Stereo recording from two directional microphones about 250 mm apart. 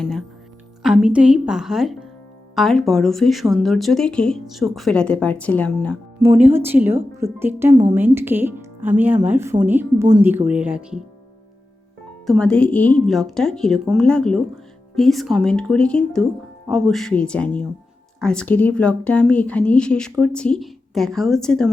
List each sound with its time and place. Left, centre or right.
0.0 s a woman's voice: centre
6.1 s a woman's voice: centre
12.2 s a woman's voice: centre